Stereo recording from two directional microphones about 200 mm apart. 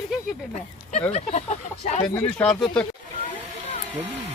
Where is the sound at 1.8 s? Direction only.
30° left (ahead or behind).